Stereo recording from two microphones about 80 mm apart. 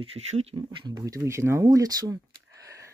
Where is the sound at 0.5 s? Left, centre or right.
Right.